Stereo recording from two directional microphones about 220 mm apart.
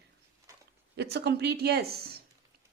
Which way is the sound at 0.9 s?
50° right (ahead or behind).